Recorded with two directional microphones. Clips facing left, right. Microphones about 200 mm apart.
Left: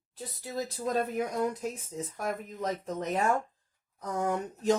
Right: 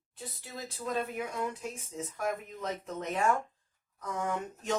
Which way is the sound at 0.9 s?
40° left (ahead or behind).